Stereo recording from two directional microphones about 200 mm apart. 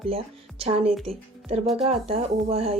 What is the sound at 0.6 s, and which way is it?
Speech, 30° right (ahead or behind).